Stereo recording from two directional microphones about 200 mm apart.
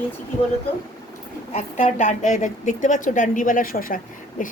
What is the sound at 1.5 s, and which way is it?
A woman's voice, 35° left (ahead or behind).